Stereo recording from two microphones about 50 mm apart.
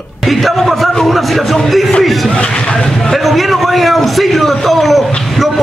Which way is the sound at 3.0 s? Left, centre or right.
Centre.